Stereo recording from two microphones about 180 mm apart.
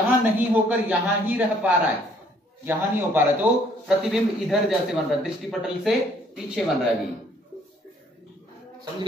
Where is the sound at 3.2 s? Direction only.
5° right (ahead or behind).